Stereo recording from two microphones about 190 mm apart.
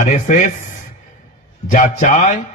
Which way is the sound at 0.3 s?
40° left (ahead or behind).